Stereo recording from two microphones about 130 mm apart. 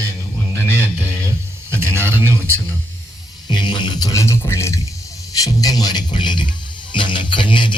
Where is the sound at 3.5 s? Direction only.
35° left (ahead or behind).